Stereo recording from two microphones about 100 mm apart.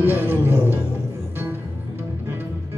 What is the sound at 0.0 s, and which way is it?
Music, 20° right (ahead or behind).